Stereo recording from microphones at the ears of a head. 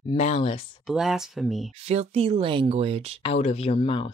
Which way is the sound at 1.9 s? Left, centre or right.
Right.